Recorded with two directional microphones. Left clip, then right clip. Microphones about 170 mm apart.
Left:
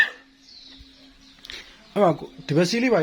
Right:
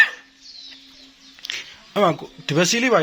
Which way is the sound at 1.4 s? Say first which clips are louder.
Right 9 dB; 15° left (ahead or behind).